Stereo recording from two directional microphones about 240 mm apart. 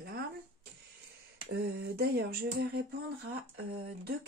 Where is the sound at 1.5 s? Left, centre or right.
Right.